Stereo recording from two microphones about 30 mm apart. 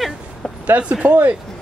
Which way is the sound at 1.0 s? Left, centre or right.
Right.